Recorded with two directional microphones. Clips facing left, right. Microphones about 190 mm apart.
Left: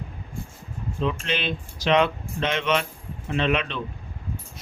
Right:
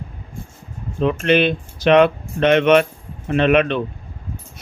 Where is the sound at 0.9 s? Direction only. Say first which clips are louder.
Right 11 dB; 60° right (ahead or behind).